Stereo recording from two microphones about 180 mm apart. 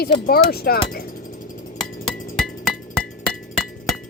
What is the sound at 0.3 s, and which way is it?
Wind chime, 60° left (ahead or behind).